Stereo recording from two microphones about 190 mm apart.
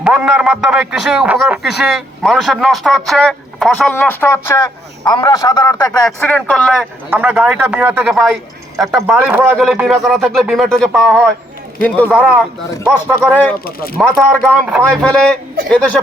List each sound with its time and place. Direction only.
0.0 s a man's voice: 5° right (ahead or behind); by 6.0 s 20° left (ahead or behind)
6.1 s speech: 5° left (ahead or behind)
7.1 s a man's voice: 5° right (ahead or behind)
13.3 s speech: 10° left (ahead or behind)
13.7 s speech: 50° left (ahead or behind)
14.0 s a man's voice: 5° left (ahead or behind)
14.5 s speech: 10° right (ahead or behind)
15.0 s a man's voice: 5° left (ahead or behind)